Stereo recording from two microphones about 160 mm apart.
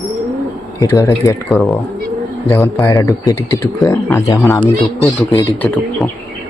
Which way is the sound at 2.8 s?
20° left (ahead or behind).